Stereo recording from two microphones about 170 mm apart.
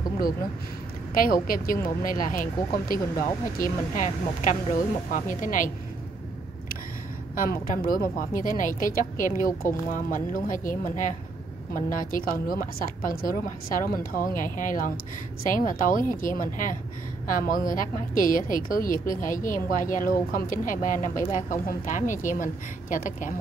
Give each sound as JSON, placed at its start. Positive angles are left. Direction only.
{"t": 1.1, "sound": "speech", "side_deg": 55}
{"t": 7.3, "sound": "a woman's voice", "side_deg": 55}